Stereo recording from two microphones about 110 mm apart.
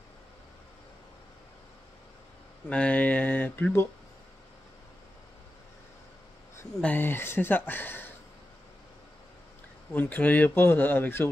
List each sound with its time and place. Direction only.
2.7 s a sound: 10° left (ahead or behind)
6.8 s speech: 15° left (ahead or behind)
9.9 s speech: 15° left (ahead or behind)